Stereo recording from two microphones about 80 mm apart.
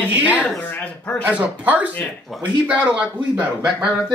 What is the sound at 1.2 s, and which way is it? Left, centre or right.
Speech, centre.